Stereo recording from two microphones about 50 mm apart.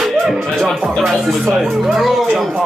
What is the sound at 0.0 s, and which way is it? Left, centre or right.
Music, centre.